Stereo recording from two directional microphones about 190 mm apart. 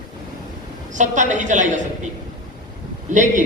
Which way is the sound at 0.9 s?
40° right (ahead or behind).